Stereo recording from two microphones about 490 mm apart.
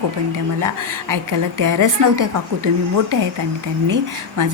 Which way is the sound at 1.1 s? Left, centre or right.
Right.